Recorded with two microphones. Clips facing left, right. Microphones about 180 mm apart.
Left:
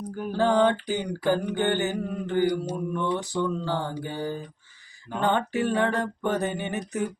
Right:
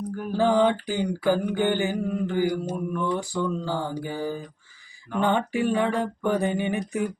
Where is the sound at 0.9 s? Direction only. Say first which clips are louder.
Right 2 dB; 20° left (ahead or behind).